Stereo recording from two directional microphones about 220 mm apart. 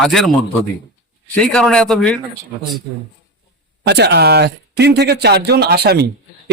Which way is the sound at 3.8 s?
50° right (ahead or behind).